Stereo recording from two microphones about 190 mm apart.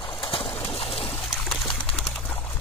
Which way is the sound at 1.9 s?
5° left (ahead or behind).